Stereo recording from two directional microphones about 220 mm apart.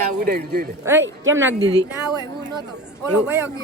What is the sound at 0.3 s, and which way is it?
Speech, 45° right (ahead or behind).